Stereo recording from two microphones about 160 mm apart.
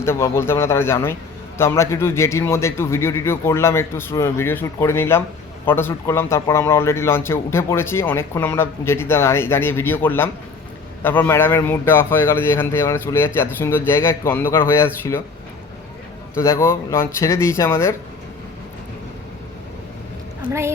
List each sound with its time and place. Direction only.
0.0 s speech: 15° left (ahead or behind)
16.3 s speech: 15° left (ahead or behind)
20.5 s a woman's voice: 15° right (ahead or behind)